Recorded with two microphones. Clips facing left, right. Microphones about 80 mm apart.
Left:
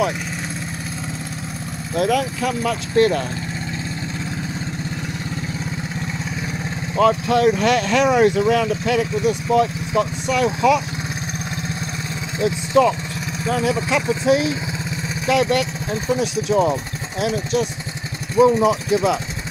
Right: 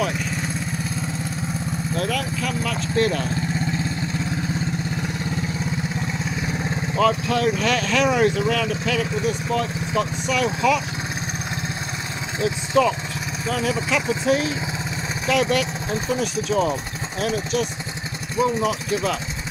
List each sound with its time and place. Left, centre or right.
2.0 s speech: left
7.0 s speech: centre
12.4 s speech: centre
18.4 s speech: left